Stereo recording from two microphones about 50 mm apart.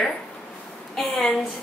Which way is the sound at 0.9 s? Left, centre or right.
Centre.